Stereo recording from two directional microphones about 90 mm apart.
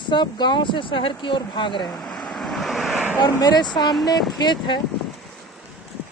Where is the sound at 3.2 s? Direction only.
50° left (ahead or behind).